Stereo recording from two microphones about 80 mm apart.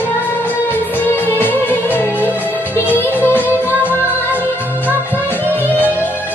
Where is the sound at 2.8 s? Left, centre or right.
Right.